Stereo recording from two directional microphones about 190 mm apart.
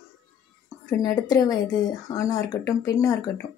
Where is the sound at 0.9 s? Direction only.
20° left (ahead or behind).